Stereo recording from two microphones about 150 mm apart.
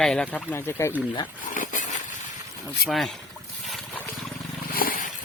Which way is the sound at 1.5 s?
60° left (ahead or behind).